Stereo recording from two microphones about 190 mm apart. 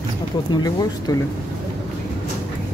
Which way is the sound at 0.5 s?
20° left (ahead or behind).